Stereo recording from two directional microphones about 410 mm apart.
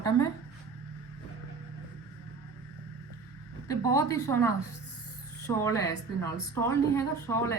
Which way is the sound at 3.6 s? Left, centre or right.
Centre.